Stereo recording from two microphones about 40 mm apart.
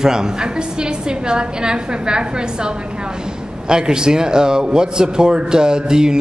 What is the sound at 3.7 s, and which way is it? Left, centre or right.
A man's voice, centre.